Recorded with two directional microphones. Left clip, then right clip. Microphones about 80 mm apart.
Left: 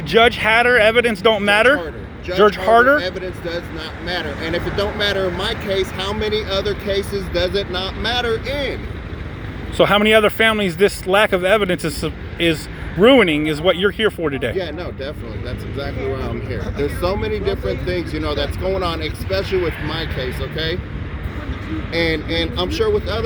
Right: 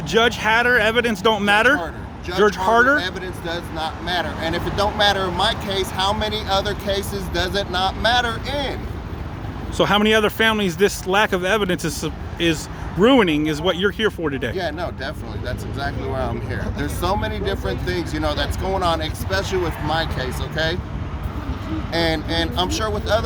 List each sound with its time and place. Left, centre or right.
0.1 s speech: right
4.0 s speech: right
9.7 s speech: centre
14.5 s speech: right
21.9 s speech: right